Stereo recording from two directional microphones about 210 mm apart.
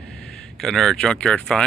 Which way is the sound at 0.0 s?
5° left (ahead or behind).